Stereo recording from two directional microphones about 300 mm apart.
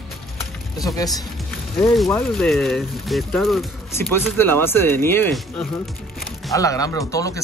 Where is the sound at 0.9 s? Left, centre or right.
Centre.